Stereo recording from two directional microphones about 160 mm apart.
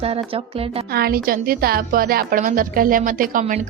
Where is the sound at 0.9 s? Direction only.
75° right (ahead or behind).